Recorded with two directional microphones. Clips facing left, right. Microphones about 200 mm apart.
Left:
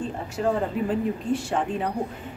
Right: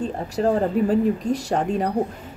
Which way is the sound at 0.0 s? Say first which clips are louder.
Right 4 dB; 40° right (ahead or behind).